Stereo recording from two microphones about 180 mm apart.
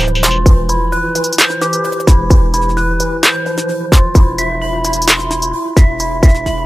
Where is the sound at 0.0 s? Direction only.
Centre (ahead or behind).